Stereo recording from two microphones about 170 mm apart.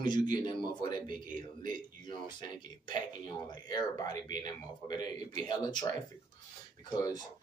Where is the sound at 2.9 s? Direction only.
25° left (ahead or behind).